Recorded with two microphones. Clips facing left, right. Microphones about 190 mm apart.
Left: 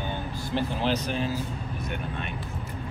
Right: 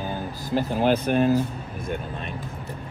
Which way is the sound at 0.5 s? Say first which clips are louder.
Right 6 dB; 45° right (ahead or behind).